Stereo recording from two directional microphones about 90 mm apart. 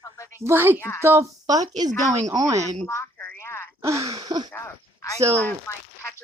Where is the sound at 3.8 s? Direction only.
35° right (ahead or behind).